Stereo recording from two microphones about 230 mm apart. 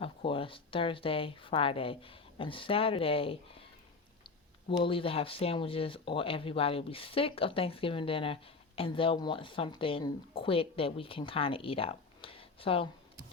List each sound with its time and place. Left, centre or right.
0.0 s speech: left
4.8 s speech: left